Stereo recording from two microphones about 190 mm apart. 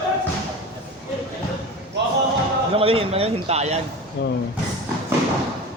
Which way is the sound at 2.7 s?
30° right (ahead or behind).